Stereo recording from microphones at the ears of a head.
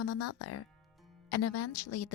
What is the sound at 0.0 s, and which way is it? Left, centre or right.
Speech, left.